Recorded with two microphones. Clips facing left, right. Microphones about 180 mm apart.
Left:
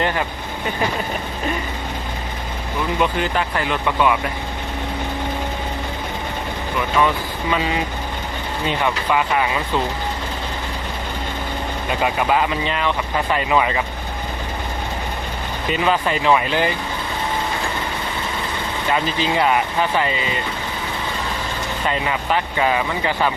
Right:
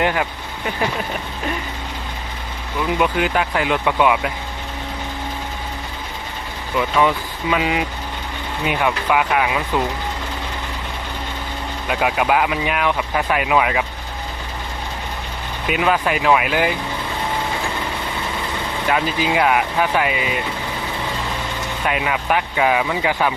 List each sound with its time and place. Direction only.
0.0 s speech: 10° right (ahead or behind)
3.0 s speech: 15° right (ahead or behind)
7.5 s speech: 10° right (ahead or behind)
11.9 s speech: 5° right (ahead or behind)
15.6 s speech: 5° right (ahead or behind)
18.9 s speech: 5° right (ahead or behind)
21.8 s speech: 5° right (ahead or behind)